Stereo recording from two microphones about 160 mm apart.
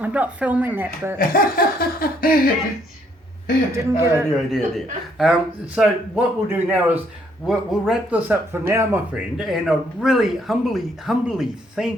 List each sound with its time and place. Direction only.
0.0 s a man's voice: 10° right (ahead or behind)
1.2 s laughter: 65° left (ahead or behind)
3.7 s a man's voice: 15° right (ahead or behind)
4.5 s a man's voice: centre (ahead or behind)